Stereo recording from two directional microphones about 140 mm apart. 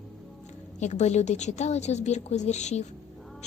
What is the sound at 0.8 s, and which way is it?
A woman's voice, 55° left (ahead or behind).